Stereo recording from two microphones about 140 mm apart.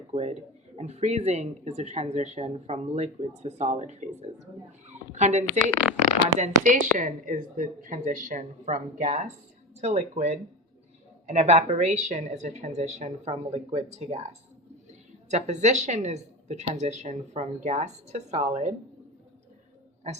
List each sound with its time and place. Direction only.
0.1 s speech: 50° right (ahead or behind)
4.9 s a sound: 55° right (ahead or behind)
6.2 s a woman's voice: 60° right (ahead or behind)